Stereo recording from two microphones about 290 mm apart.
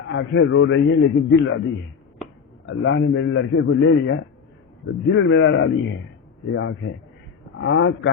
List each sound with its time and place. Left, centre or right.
0.1 s a man's voice: left
2.6 s a man's voice: left